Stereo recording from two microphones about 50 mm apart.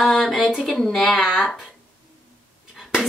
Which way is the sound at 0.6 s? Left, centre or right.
Centre.